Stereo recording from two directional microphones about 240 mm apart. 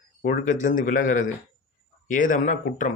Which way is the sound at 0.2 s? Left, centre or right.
Left.